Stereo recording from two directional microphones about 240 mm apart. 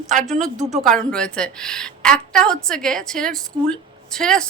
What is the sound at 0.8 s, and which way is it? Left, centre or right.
A woman's voice, centre.